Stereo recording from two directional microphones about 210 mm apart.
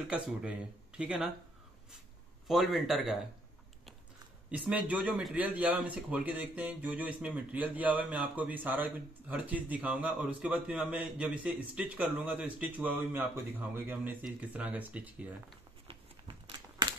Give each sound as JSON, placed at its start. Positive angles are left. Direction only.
{"t": 0.1, "sound": "speech", "side_deg": -5}
{"t": 2.4, "sound": "speech", "side_deg": 0}
{"t": 4.5, "sound": "a man's voice", "side_deg": -5}
{"t": 15.9, "sound": "crumpling", "side_deg": -25}